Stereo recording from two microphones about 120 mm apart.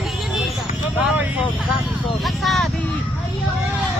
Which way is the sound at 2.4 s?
Centre (ahead or behind).